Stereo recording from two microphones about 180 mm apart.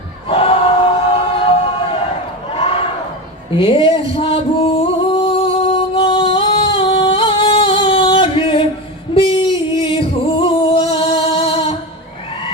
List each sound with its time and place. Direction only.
0.3 s choir: 30° left (ahead or behind)
2.5 s a sound: 30° left (ahead or behind)
3.5 s singing: 30° left (ahead or behind)
9.8 s music: 30° left (ahead or behind)